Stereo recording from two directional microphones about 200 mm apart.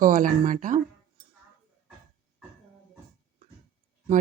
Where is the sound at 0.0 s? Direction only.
40° right (ahead or behind).